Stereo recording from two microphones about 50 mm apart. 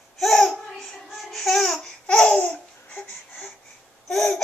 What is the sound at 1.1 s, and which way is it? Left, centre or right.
Babbling, centre.